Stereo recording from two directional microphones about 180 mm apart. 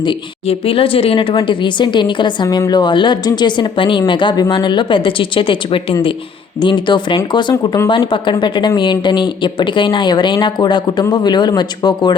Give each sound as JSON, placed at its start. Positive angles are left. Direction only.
{"t": 0.0, "sound": "a woman's voice", "side_deg": 30}